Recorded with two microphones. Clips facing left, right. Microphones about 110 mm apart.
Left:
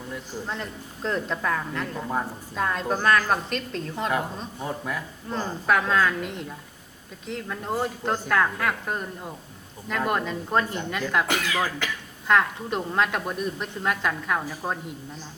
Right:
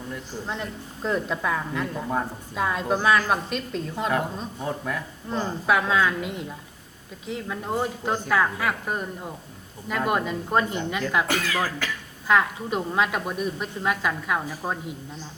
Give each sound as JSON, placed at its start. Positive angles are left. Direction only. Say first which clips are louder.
{"t": 0.4, "sound": "speech", "louder": "right 1 dB", "side_deg": -5}
{"t": 11.3, "sound": "speech", "louder": "even", "side_deg": 20}
{"t": 12.3, "sound": "speech", "louder": "even", "side_deg": -5}